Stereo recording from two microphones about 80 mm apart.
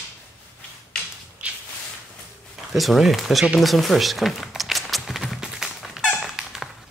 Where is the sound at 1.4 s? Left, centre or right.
Centre.